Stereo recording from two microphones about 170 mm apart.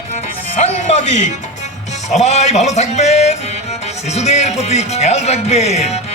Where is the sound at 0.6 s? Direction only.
45° left (ahead or behind).